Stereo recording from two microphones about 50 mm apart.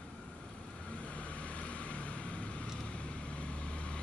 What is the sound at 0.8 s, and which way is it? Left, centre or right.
Vehicle, left.